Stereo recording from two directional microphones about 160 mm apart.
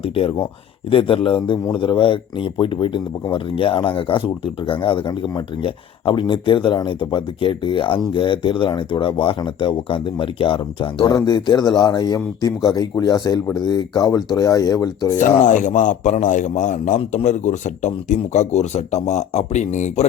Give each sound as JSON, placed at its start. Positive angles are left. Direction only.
{"t": 0.2, "sound": "a man's voice", "side_deg": 35}
{"t": 15.2, "sound": "speech", "side_deg": 50}
{"t": 17.0, "sound": "a man's voice", "side_deg": 35}
{"t": 17.2, "sound": "speech", "side_deg": 50}